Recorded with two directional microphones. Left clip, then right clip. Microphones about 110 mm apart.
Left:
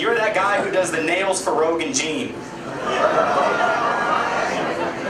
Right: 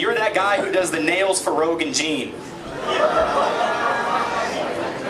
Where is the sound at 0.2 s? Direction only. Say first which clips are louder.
Even; 55° left (ahead or behind).